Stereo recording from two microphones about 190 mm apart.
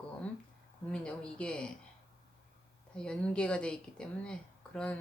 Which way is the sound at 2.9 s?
5° left (ahead or behind).